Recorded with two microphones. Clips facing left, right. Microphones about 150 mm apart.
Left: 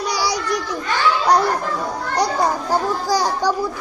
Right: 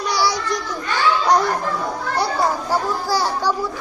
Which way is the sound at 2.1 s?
15° left (ahead or behind).